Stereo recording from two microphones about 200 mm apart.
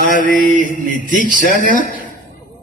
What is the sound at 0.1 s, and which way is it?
Mantra, 45° left (ahead or behind).